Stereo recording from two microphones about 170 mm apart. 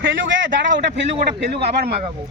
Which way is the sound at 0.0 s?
90° right.